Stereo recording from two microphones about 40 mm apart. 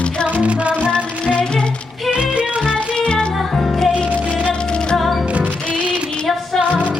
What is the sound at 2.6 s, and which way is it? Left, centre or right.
Music, left.